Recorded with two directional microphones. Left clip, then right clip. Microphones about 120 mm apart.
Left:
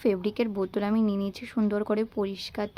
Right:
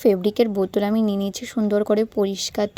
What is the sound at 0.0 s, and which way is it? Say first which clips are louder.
Speech: right 9 dB; 40° right (ahead or behind).